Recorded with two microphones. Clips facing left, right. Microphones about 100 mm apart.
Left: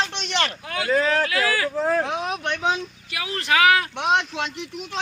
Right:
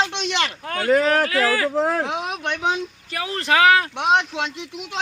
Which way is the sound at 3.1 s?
30° right (ahead or behind).